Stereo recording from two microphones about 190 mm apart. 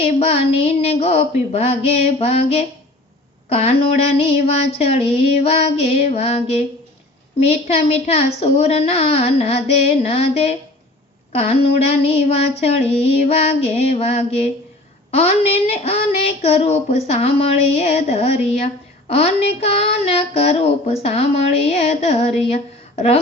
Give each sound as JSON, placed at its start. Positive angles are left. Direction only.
{"t": 0.0, "sound": "child singing", "side_deg": 35}